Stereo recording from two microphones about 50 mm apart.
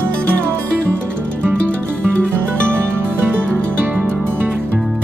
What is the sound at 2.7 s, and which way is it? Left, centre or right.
Music, right.